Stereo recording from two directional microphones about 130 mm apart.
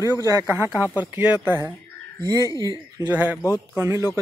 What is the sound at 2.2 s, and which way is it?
Speech, 30° right (ahead or behind).